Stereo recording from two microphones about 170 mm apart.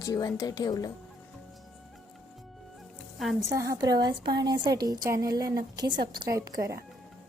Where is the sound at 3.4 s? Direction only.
20° right (ahead or behind).